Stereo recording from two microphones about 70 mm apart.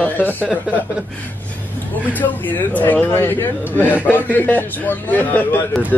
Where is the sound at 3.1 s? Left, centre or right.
Left.